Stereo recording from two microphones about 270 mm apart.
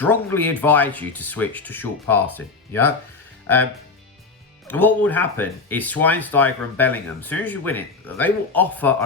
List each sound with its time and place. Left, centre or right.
0.0 s speech: centre
4.7 s speech: centre